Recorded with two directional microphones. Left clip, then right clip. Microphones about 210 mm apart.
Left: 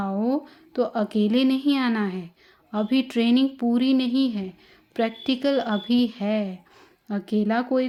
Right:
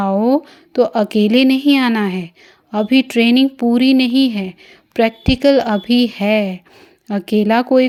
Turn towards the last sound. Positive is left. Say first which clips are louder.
# right 11 dB
turn(degrees=-30)  # may be behind; listen again after turning